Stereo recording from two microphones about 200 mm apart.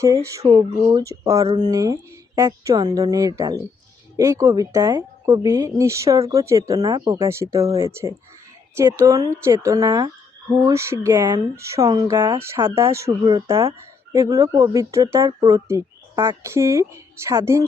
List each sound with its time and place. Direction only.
0.0 s speech: 15° right (ahead or behind)